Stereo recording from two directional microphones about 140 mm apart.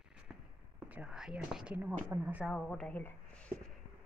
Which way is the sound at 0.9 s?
5° right (ahead or behind).